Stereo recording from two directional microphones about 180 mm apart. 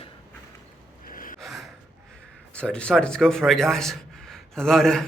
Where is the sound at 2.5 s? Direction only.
5° left (ahead or behind).